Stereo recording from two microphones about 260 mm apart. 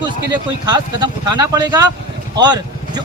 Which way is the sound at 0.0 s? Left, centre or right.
Centre.